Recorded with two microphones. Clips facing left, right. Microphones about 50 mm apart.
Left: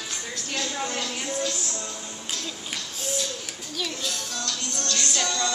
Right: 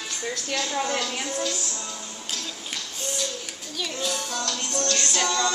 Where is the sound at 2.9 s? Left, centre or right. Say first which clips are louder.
Left 2 dB; centre.